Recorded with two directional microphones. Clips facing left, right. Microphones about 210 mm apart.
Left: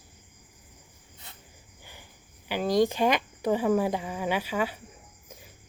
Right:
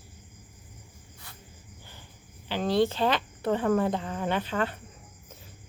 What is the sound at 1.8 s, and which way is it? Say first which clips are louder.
Cricket: left 3 dB; 15° left (ahead or behind).